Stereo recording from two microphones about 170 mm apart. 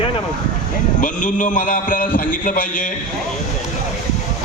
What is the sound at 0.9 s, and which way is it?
A man's voice, 50° left (ahead or behind).